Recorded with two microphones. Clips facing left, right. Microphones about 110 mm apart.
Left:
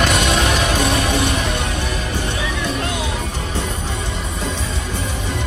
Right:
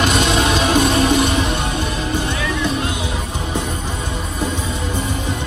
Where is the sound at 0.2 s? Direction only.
15° right (ahead or behind).